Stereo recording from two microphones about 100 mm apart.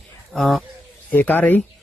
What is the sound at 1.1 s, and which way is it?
Speech, 20° left (ahead or behind).